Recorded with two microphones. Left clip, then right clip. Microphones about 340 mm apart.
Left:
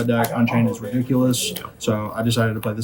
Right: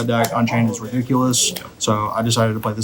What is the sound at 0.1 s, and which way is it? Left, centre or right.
Speech, centre.